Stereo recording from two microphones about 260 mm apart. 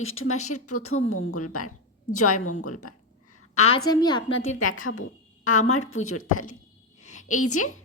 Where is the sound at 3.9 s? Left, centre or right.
Centre.